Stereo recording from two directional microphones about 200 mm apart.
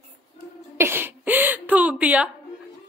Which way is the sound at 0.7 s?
10° right (ahead or behind).